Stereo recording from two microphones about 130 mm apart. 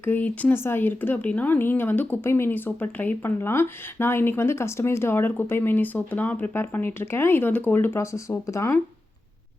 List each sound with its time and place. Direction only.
0.0 s speech: 15° left (ahead or behind)